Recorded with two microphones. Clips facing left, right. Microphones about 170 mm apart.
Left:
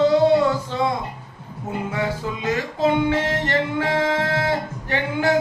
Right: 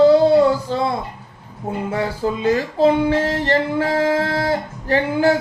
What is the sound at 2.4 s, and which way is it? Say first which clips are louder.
Music: right 5 dB; 35° right (ahead or behind).